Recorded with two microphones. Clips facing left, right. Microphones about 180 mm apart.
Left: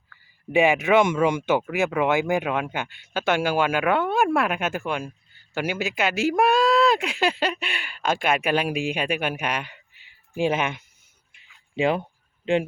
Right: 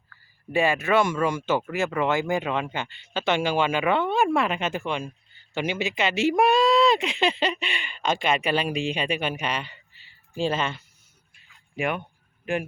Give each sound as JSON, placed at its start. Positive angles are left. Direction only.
{"t": 0.5, "sound": "speech", "side_deg": 15}
{"t": 11.8, "sound": "speech", "side_deg": 30}